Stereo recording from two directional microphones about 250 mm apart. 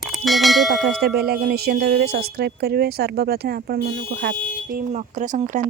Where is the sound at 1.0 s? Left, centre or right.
Right.